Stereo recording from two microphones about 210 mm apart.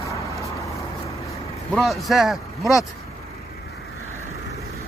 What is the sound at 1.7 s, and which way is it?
Speech, centre (ahead or behind).